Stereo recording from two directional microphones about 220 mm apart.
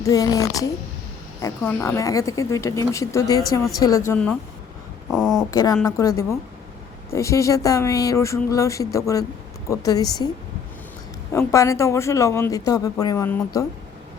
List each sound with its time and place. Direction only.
0.0 s a woman's voice: 15° left (ahead or behind)
5.1 s speech: centre (ahead or behind)
5.5 s a woman's voice: 15° left (ahead or behind)
11.3 s a woman's voice: 15° left (ahead or behind)